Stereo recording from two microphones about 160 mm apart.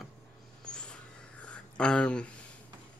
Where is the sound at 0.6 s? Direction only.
5° left (ahead or behind).